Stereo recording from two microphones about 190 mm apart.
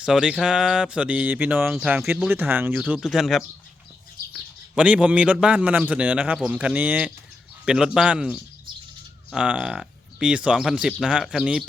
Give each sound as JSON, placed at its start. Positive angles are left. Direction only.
{"t": 0.0, "sound": "a man's voice", "side_deg": -5}
{"t": 4.7, "sound": "a man's voice", "side_deg": -5}